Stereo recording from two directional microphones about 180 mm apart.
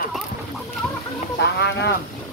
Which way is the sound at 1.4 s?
65° left (ahead or behind).